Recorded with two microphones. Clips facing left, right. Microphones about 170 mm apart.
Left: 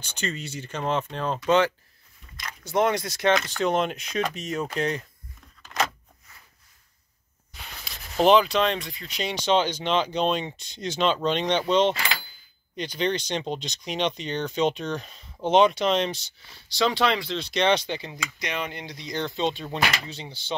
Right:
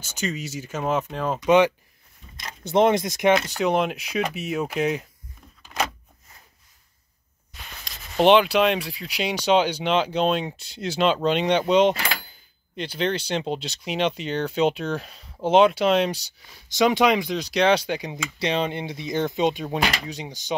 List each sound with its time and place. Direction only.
0.0 s speech: centre (ahead or behind)
1.4 s speech: 15° right (ahead or behind)
3.4 s speech: 10° right (ahead or behind)
7.8 s speech: centre (ahead or behind)
18.1 s speech: 25° right (ahead or behind)